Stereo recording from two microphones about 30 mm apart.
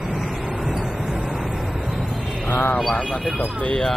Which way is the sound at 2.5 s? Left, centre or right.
Left.